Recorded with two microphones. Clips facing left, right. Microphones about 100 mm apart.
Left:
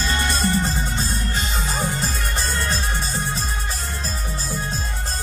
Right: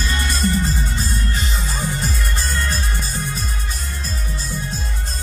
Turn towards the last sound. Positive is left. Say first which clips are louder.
# left 1 dB
turn(degrees=30)  # may be behind; listen again after turning